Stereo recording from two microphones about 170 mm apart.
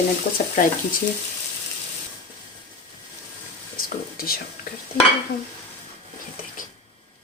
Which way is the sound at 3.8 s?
60° left (ahead or behind).